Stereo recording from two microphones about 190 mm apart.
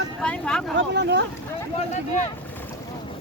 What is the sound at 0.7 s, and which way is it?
Speech, 65° right (ahead or behind).